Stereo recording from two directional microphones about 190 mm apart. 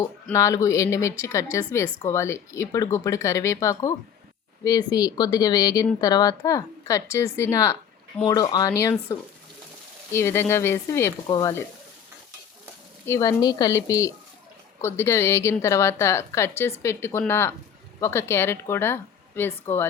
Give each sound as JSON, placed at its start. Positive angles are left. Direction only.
{"t": 0.3, "sound": "a woman's voice", "side_deg": 15}
{"t": 13.1, "sound": "a woman's voice", "side_deg": 15}